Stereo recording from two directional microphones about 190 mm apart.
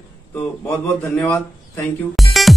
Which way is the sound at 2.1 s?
Centre (ahead or behind).